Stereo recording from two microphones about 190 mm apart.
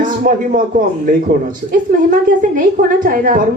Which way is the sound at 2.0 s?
45° right (ahead or behind).